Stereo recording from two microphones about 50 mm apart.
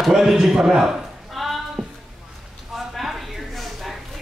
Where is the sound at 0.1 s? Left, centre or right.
Centre.